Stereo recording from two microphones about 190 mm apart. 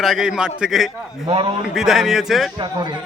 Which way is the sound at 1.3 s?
30° right (ahead or behind).